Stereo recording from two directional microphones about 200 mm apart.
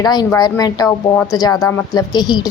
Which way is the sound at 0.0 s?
20° left (ahead or behind).